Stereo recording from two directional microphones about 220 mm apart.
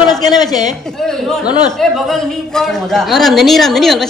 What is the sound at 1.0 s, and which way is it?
A man's voice, centre (ahead or behind).